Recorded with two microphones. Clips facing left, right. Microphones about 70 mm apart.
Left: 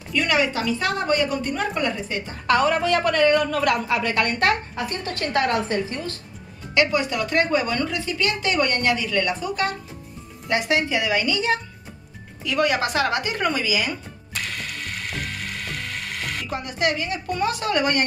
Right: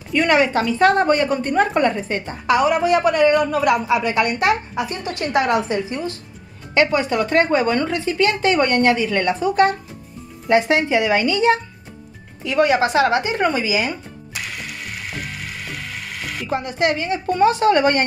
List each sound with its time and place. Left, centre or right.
0.1 s a woman's voice: right
2.4 s a woman's voice: centre
6.7 s a woman's voice: right
14.3 s ratchet: centre
16.4 s a woman's voice: right